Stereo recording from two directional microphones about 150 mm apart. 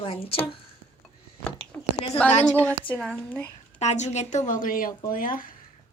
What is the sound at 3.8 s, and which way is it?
Speech, 50° left (ahead or behind).